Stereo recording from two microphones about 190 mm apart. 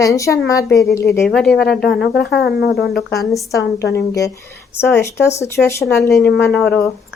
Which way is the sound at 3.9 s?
15° left (ahead or behind).